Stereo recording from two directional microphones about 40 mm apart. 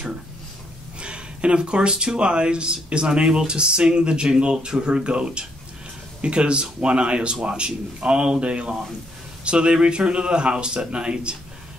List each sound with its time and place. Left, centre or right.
0.9 s speech: right